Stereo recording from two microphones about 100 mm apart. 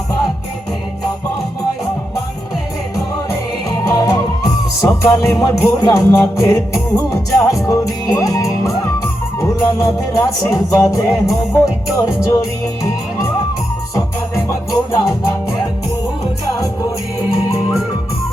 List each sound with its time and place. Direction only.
3.8 s music: 40° left (ahead or behind)